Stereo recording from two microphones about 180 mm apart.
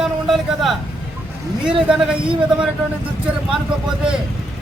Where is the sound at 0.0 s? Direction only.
Centre (ahead or behind).